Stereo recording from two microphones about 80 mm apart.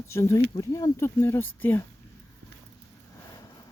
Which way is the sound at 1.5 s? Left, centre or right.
Left.